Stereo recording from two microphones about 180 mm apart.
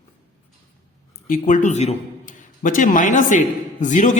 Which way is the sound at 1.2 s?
50° left (ahead or behind).